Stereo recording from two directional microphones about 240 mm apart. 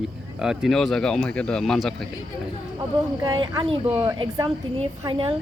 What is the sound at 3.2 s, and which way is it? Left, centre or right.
Speech, centre.